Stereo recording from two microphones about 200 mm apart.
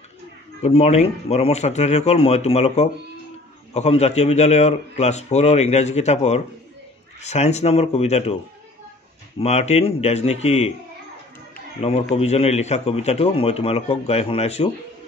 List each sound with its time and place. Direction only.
0.6 s a man's voice: 35° left (ahead or behind)
9.4 s a man's voice: 30° left (ahead or behind)
12.2 s a man's voice: 30° left (ahead or behind)